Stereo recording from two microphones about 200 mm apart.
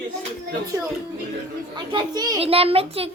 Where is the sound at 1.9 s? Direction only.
20° right (ahead or behind).